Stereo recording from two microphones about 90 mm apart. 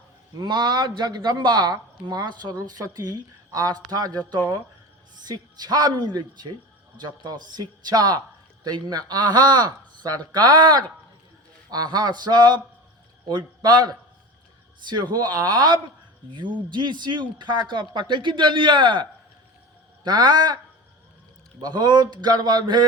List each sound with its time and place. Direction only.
0.3 s speech: 50° right (ahead or behind)
5.2 s a man's voice: 50° right (ahead or behind)
16.3 s speech: 60° right (ahead or behind)
20.1 s speech: 50° right (ahead or behind)
21.6 s speech: 55° right (ahead or behind)